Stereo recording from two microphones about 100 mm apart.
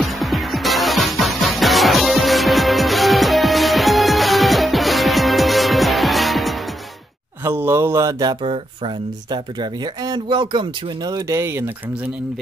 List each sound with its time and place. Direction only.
0.0 s music: centre (ahead or behind)
7.4 s mantra: 25° right (ahead or behind)
8.4 s speech: 60° right (ahead or behind); by 11.7 s 25° right (ahead or behind)